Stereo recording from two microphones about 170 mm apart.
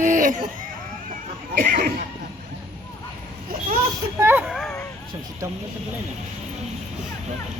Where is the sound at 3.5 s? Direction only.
55° right (ahead or behind).